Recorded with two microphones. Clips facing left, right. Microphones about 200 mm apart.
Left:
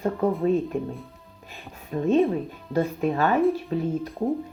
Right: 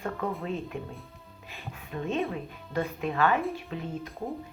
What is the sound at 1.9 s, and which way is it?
A woman's voice, 35° left (ahead or behind).